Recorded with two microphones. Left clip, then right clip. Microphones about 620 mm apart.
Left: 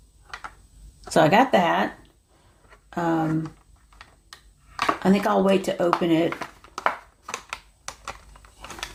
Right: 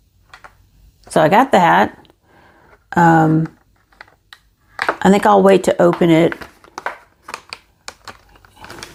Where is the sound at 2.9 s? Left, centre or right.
Right.